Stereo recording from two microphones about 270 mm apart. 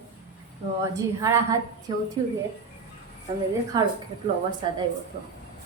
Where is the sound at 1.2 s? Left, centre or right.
Centre.